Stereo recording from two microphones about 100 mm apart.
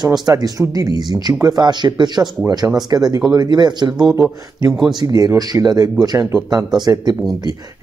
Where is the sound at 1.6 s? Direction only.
50° right (ahead or behind).